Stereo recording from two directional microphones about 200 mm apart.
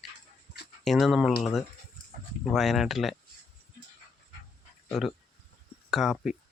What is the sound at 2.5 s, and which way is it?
Speech, centre (ahead or behind).